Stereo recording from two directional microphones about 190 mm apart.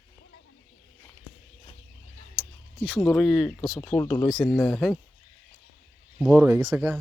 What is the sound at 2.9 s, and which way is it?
Speech, 5° left (ahead or behind).